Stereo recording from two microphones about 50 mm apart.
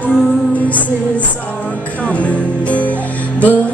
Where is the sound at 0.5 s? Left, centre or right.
Left.